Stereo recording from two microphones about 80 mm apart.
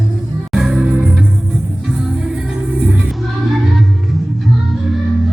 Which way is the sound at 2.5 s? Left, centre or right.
Centre.